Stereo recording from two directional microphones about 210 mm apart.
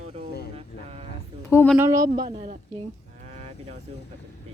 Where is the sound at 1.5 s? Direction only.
10° left (ahead or behind).